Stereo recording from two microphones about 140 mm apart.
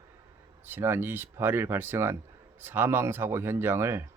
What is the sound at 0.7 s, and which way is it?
Speech, 15° right (ahead or behind).